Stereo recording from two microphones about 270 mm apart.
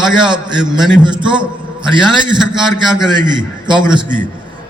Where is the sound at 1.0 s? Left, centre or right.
Centre.